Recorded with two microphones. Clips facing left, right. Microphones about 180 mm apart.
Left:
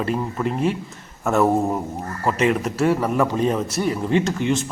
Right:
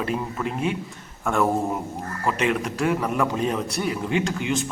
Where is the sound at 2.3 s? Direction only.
40° left (ahead or behind).